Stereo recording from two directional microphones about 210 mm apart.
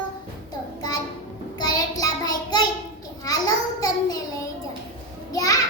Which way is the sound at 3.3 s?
15° left (ahead or behind).